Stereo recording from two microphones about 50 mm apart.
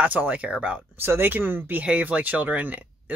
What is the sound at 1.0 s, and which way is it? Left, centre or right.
Speech, right.